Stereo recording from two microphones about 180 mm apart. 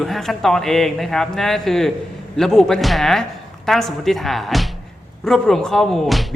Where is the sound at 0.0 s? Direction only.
Centre (ahead or behind).